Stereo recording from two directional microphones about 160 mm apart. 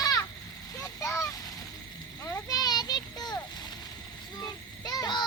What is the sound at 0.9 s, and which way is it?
Vehicle, 20° left (ahead or behind).